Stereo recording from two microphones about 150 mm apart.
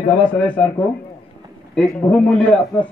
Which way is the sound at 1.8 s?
10° left (ahead or behind).